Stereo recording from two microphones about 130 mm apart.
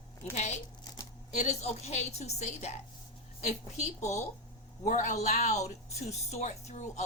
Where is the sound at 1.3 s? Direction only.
60° left (ahead or behind).